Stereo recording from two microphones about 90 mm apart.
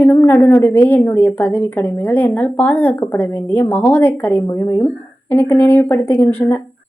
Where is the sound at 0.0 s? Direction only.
25° left (ahead or behind).